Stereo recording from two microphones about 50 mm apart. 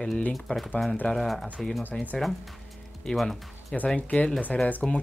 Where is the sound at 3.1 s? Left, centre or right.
Centre.